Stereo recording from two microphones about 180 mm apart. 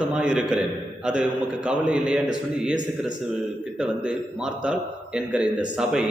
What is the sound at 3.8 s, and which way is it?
A man's voice, 5° right (ahead or behind).